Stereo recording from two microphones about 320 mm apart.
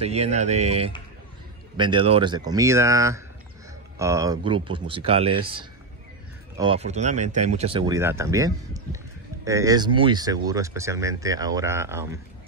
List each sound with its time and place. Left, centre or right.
0.0 s speech: centre
6.6 s speech: centre